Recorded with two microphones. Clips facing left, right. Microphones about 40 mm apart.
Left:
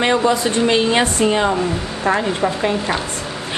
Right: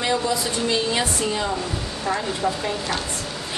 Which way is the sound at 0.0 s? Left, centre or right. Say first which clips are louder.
Left 7 dB; left.